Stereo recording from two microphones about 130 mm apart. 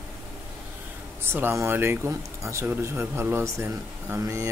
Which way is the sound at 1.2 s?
20° right (ahead or behind).